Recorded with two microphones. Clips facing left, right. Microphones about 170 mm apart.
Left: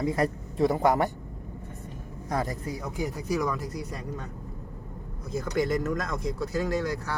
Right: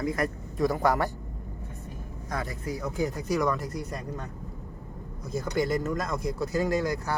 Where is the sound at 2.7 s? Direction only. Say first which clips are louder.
Right 5 dB; 20° left (ahead or behind).